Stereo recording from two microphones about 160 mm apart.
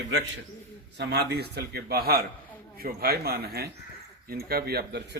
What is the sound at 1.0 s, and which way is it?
Speech, 90° right.